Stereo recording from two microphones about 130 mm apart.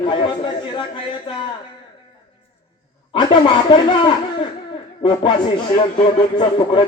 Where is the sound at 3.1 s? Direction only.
35° left (ahead or behind).